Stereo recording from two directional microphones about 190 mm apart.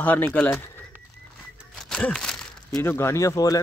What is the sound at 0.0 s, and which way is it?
Speech, 10° left (ahead or behind).